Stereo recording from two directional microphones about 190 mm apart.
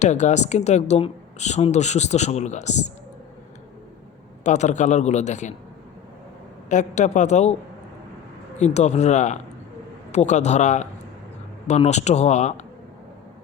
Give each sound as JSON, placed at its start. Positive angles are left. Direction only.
{"t": 0.0, "sound": "speech", "side_deg": 40}
{"t": 4.4, "sound": "speech", "side_deg": 40}
{"t": 6.7, "sound": "speech", "side_deg": 40}
{"t": 8.5, "sound": "speech", "side_deg": 35}